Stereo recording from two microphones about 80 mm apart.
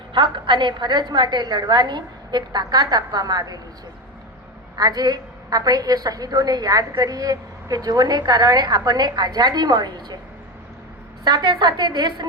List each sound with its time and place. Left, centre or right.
0.1 s a woman's voice: right
4.8 s a woman's voice: right
11.2 s a woman's voice: right